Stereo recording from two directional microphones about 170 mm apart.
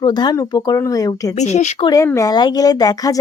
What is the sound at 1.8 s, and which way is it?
Speech, 20° left (ahead or behind).